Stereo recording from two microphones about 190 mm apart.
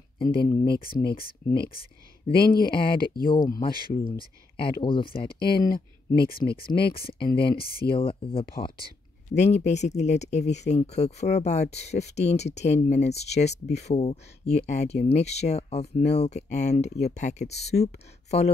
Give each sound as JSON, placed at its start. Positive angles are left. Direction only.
{"t": 0.7, "sound": "speech", "side_deg": 50}
{"t": 3.3, "sound": "speech", "side_deg": 20}
{"t": 3.6, "sound": "speech", "side_deg": 50}
{"t": 7.9, "sound": "speech", "side_deg": 30}
{"t": 8.5, "sound": "speech", "side_deg": 55}
{"t": 9.3, "sound": "speech", "side_deg": 35}